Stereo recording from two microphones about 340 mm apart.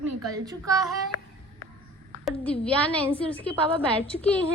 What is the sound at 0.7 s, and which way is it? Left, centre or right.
Speech, centre.